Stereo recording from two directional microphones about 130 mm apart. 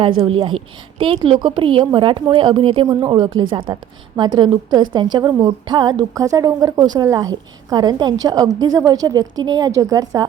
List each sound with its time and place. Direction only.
0.0 s a woman's voice: 40° right (ahead or behind)